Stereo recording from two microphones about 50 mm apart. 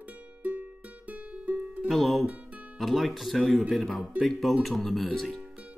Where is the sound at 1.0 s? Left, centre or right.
Right.